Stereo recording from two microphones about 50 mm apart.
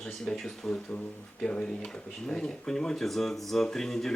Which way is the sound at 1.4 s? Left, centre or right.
Left.